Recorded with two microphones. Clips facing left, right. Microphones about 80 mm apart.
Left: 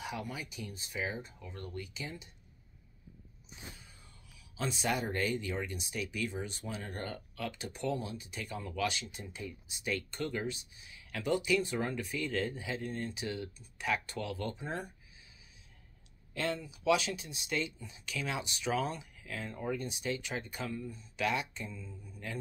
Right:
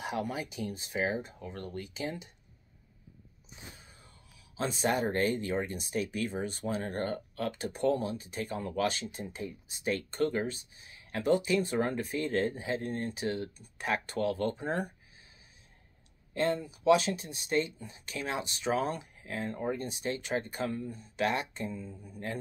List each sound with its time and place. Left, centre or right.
0.0 s speech: right
4.6 s speech: right
16.3 s speech: right